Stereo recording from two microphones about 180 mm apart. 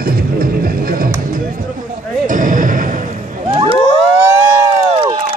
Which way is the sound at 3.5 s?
35° right (ahead or behind).